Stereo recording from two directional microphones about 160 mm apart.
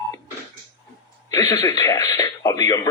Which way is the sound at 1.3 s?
20° left (ahead or behind).